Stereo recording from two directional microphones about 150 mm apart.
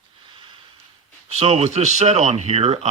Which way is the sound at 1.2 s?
45° right (ahead or behind).